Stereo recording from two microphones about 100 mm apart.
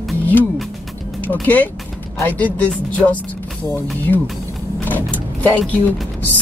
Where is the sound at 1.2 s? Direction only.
15° left (ahead or behind).